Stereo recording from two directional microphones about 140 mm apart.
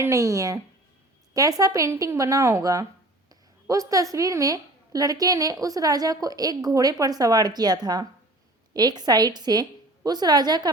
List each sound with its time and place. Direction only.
0.0 s a woman's voice: 20° right (ahead or behind)